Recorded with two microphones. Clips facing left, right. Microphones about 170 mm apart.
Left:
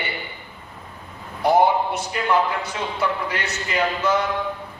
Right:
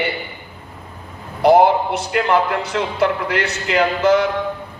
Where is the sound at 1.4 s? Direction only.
75° right (ahead or behind).